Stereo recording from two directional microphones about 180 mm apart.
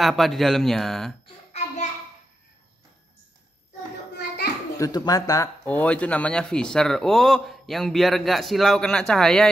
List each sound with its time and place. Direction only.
0.0 s a man's voice: centre (ahead or behind)
1.2 s a sound: 35° left (ahead or behind)
4.7 s speech: 20° left (ahead or behind)
5.7 s a man's voice: 10° left (ahead or behind)